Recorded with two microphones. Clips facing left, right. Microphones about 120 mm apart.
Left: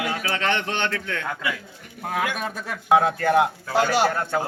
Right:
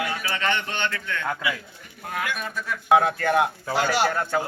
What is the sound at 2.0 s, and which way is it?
Speech, 90° left.